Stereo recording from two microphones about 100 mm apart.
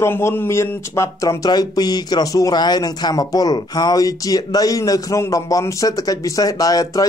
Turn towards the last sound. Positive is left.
turn(degrees=35)  # may be behind; listen again after turning